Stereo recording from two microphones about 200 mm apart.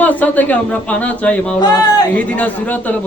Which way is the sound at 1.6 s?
20° left (ahead or behind).